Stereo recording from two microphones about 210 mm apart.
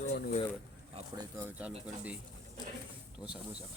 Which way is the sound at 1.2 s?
10° right (ahead or behind).